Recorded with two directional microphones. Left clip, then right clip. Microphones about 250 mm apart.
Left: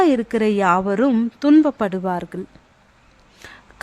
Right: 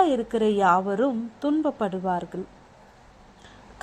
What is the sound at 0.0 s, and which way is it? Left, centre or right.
A woman's voice, left.